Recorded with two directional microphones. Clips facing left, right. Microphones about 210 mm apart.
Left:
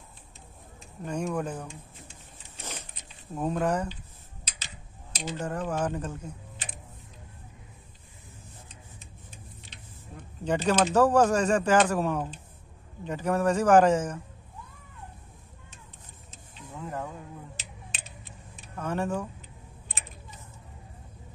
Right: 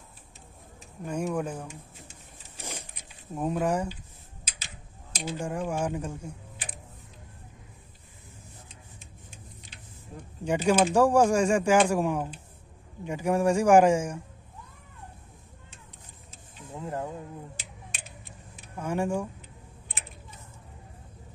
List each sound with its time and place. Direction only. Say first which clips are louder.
1.0 s a man's voice: right 1 dB; 10° right (ahead or behind)
2.6 s a sound: right 1 dB; 10° right (ahead or behind)
5.1 s speech: even; 10° right (ahead or behind)
9.7 s a man's voice: right 3 dB; 10° right (ahead or behind)
16.7 s a sound: right 2 dB; 30° right (ahead or behind)
18.8 s a man's voice: right 1 dB; 10° right (ahead or behind)